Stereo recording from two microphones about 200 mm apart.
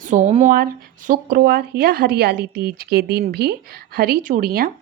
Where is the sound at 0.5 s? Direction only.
45° right (ahead or behind).